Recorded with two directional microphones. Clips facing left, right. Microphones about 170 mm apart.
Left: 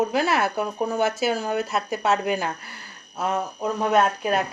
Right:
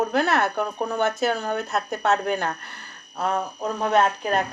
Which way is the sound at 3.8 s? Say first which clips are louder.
Even; 5° left (ahead or behind).